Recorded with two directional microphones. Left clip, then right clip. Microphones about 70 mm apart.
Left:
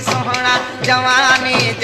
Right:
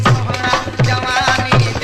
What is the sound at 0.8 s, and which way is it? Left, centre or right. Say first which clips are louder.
Music: left 6 dB; right.